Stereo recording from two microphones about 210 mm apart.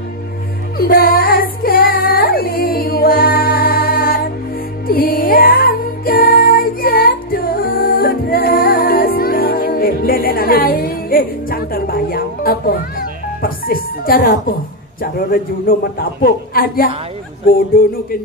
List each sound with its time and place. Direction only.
0.7 s child singing: 45° left (ahead or behind)
4.8 s music: 45° left (ahead or behind)
15.0 s a man's voice: 45° left (ahead or behind)